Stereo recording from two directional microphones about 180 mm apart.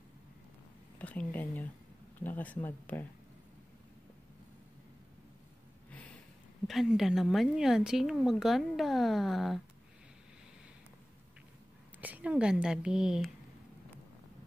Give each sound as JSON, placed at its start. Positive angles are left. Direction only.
{"t": 0.9, "sound": "speech", "side_deg": 10}
{"t": 6.7, "sound": "speech", "side_deg": 0}
{"t": 12.0, "sound": "speech", "side_deg": -10}